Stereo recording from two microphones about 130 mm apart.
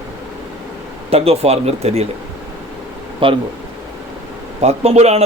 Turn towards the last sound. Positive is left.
turn(degrees=-55)  # may be behind; listen again after turning